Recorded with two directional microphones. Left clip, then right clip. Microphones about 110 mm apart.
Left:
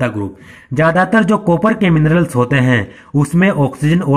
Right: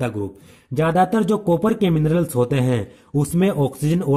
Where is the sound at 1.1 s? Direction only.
30° right (ahead or behind).